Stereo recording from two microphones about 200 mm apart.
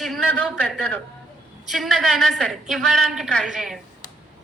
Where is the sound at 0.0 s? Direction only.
5° left (ahead or behind).